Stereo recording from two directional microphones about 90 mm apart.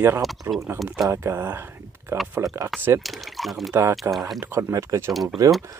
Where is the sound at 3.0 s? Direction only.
Centre (ahead or behind).